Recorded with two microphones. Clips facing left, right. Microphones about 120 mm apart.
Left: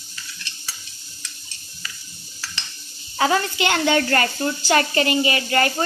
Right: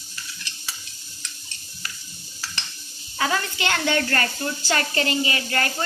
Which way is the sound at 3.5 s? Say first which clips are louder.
Left 4 dB; 20° left (ahead or behind).